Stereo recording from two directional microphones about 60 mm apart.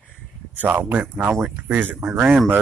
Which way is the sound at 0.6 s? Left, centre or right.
Right.